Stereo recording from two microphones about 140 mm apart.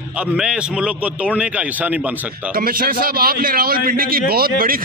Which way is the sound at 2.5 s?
90° right.